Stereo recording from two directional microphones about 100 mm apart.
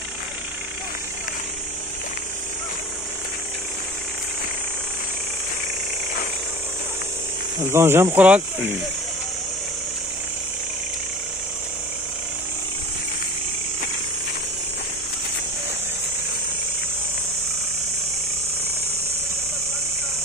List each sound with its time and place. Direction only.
7.6 s speech: 25° right (ahead or behind)